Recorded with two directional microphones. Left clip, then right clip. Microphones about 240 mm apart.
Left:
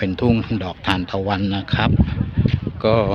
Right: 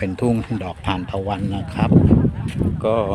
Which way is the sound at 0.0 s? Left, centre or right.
Centre.